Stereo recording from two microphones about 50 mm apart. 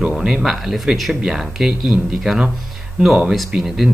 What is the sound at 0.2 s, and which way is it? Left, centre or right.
Speech, centre.